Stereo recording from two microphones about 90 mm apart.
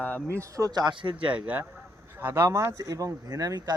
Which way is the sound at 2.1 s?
25° right (ahead or behind).